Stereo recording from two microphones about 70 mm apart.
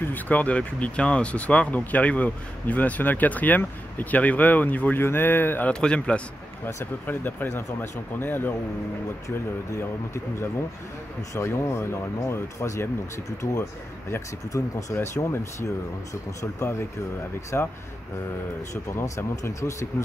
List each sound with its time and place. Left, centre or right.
0.0 s speech: left
5.7 s speech: centre
6.6 s speech: left
9.8 s speech: left
15.1 s speech: left
17.5 s speech: left
18.9 s speech: left